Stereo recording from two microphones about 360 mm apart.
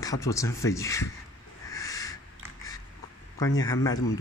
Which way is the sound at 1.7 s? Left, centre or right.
Centre.